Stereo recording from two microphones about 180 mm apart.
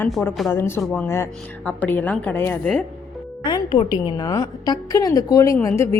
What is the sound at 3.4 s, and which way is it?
Music, 25° left (ahead or behind).